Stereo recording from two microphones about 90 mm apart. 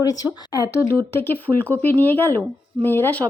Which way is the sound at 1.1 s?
25° left (ahead or behind).